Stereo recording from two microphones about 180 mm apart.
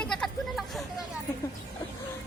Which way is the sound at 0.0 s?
5° left (ahead or behind).